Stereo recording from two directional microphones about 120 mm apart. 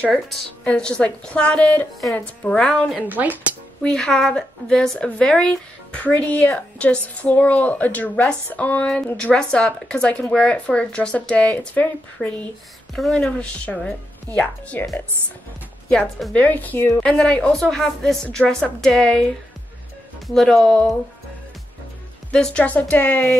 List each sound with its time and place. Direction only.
0.0 s speech: 5° left (ahead or behind)
3.0 s speech: 15° right (ahead or behind)
3.8 s speech: 5° left (ahead or behind)
15.9 s speech: 10° left (ahead or behind)
17.0 s a woman's voice: 10° left (ahead or behind)
20.2 s a woman's voice: 5° left (ahead or behind)
22.3 s speech: 10° left (ahead or behind)